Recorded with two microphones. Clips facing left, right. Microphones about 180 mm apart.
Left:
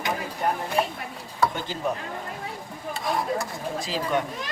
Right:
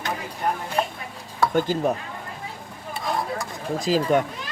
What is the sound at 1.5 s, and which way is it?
Speech, 50° right (ahead or behind).